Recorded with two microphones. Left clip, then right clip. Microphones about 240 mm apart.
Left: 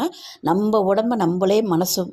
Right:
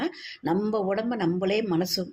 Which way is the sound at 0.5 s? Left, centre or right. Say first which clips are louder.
Left 8 dB; left.